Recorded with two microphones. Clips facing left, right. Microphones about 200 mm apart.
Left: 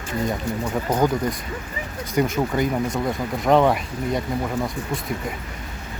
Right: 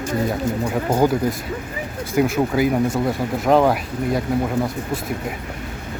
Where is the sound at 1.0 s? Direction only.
5° right (ahead or behind).